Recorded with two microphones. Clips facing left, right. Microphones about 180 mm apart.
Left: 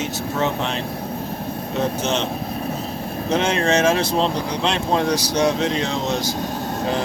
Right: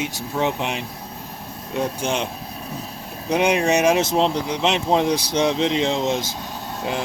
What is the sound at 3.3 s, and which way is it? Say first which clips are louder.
Speech: right 1 dB; 15° right (ahead or behind).